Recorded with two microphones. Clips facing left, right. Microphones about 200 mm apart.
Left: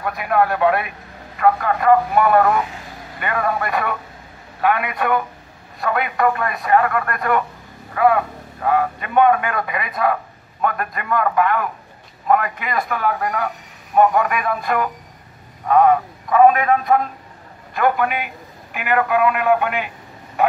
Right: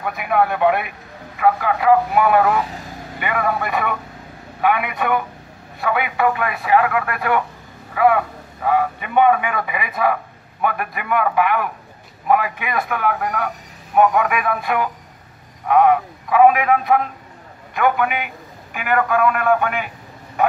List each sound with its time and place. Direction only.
0.0 s a man's voice: centre (ahead or behind)
12.3 s a man's voice: 5° right (ahead or behind)